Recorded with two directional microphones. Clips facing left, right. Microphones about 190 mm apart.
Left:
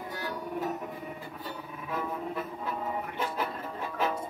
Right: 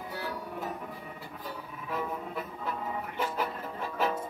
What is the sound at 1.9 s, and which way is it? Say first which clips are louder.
Music: left 1 dB; centre (ahead or behind).